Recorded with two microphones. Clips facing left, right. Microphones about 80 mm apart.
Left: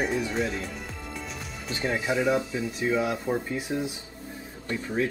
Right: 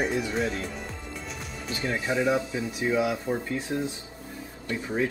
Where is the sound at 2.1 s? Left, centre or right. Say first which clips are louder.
Right 1 dB; centre.